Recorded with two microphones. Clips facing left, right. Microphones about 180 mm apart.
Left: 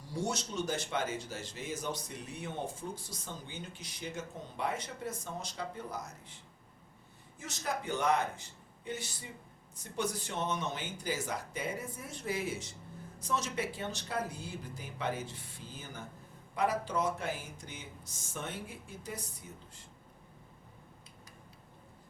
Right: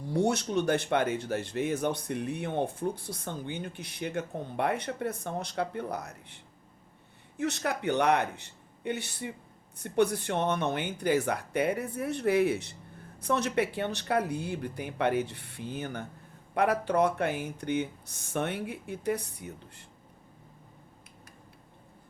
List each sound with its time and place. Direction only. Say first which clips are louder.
0.0 s speech: right 9 dB; 60° right (ahead or behind)